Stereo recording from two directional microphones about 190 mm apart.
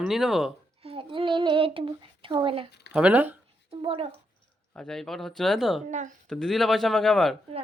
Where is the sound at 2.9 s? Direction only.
5° right (ahead or behind).